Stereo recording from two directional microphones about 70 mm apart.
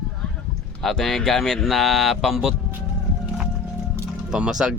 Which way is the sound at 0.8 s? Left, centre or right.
Centre.